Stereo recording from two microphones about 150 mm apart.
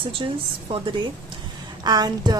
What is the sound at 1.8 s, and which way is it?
Speech, 25° right (ahead or behind).